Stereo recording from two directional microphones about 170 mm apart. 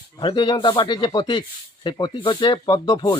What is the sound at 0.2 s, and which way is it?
A man's voice, 30° left (ahead or behind).